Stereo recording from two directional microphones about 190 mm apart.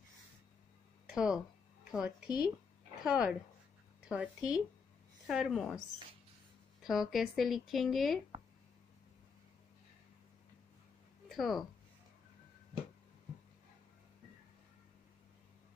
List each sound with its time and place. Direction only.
1.1 s speech: 5° right (ahead or behind)
2.2 s speech: 20° left (ahead or behind)
3.0 s speech: 5° right (ahead or behind)
6.8 s speech: centre (ahead or behind)
11.2 s speech: centre (ahead or behind)